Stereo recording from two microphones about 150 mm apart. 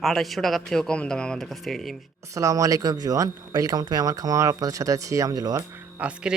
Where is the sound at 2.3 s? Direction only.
20° right (ahead or behind).